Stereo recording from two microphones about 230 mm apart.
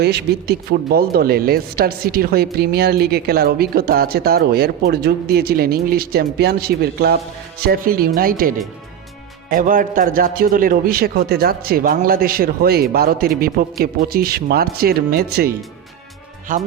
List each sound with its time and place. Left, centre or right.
0.0 s speech: right